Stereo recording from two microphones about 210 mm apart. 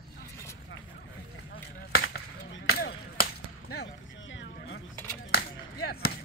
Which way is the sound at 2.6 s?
50° left (ahead or behind).